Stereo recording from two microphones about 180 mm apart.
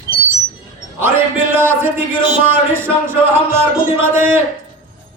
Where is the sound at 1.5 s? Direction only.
15° right (ahead or behind).